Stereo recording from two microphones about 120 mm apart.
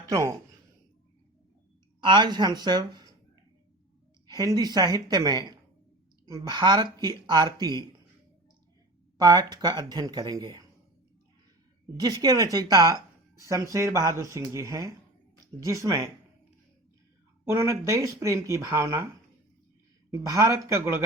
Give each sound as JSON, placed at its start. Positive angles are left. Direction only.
{"t": 0.0, "sound": "speech", "side_deg": -25}
{"t": 2.0, "sound": "speech", "side_deg": -40}
{"t": 4.3, "sound": "speech", "side_deg": -30}
{"t": 9.1, "sound": "speech", "side_deg": -35}
{"t": 11.9, "sound": "speech", "side_deg": -30}
{"t": 17.4, "sound": "speech", "side_deg": -20}
{"t": 20.2, "sound": "speech", "side_deg": -30}